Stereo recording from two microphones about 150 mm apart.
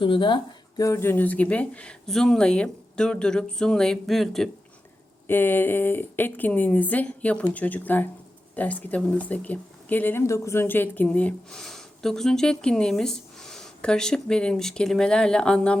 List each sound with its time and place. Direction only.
0.0 s speech: 35° left (ahead or behind)
0.8 s speech: 20° left (ahead or behind); by 4.4 s centre (ahead or behind)
5.3 s speech: 15° left (ahead or behind)